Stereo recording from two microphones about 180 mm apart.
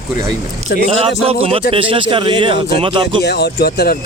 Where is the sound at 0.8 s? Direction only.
35° right (ahead or behind).